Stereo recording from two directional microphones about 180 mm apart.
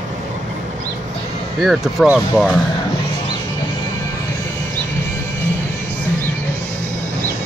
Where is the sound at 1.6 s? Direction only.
Centre (ahead or behind).